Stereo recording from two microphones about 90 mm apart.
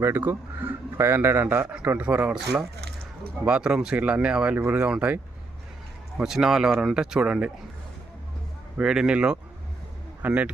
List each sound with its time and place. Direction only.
0.0 s a man's voice: 25° right (ahead or behind)
3.4 s speech: 10° right (ahead or behind)
8.8 s speech: 10° right (ahead or behind)